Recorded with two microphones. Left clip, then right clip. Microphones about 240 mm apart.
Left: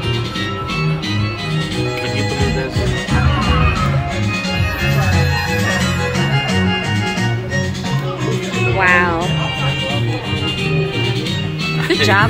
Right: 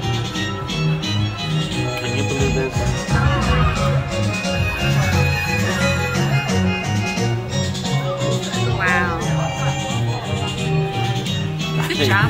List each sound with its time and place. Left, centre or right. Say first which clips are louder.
8.8 s music: left 6 dB; centre
11.9 s music: left 5 dB; centre